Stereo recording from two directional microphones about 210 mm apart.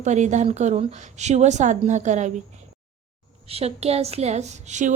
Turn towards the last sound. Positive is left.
turn(degrees=-35)  # may be behind; listen again after turning